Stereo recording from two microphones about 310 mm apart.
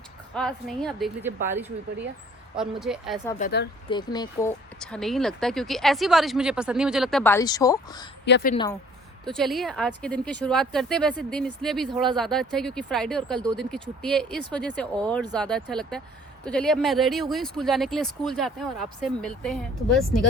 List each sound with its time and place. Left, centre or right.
0.3 s speech: centre
2.8 s speech: centre
3.3 s speech: left
3.8 s speech: centre
8.2 s a woman's voice: left
9.2 s speech: centre